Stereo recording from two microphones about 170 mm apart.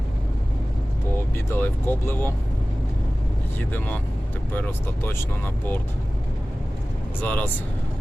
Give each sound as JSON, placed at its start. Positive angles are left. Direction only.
{"t": 1.5, "sound": "speech", "side_deg": 10}
{"t": 3.6, "sound": "speech", "side_deg": 10}
{"t": 7.2, "sound": "speech", "side_deg": 10}